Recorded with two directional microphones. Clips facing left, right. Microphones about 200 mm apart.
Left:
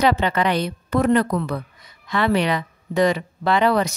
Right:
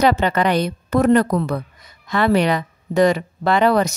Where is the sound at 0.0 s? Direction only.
45° right (ahead or behind).